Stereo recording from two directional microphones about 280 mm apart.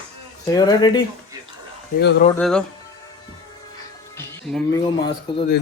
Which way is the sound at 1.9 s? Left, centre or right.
Left.